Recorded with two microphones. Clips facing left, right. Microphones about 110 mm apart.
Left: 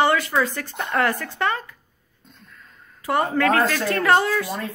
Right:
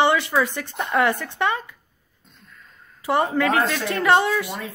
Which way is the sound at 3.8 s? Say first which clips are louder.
Even; 25° right (ahead or behind).